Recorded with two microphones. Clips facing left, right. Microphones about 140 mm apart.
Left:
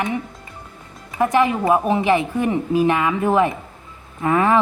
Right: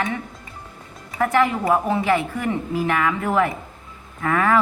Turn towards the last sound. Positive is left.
turn(degrees=20)  # may be behind; listen again after turning